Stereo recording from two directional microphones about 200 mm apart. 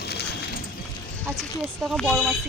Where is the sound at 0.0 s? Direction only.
55° left (ahead or behind).